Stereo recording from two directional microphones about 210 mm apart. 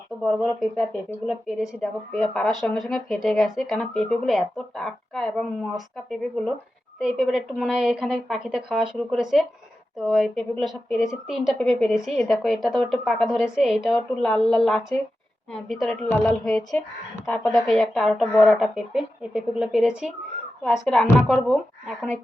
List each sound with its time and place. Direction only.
1.3 s speech: 5° right (ahead or behind)